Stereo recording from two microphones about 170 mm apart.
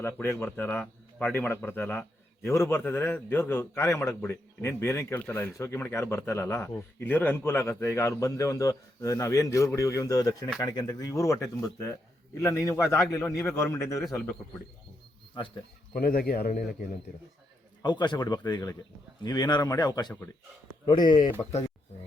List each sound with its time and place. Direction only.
0.0 s a man's voice: 15° left (ahead or behind)
15.4 s speech: 30° left (ahead or behind)
16.0 s a man's voice: 60° left (ahead or behind)
17.8 s speech: 25° left (ahead or behind)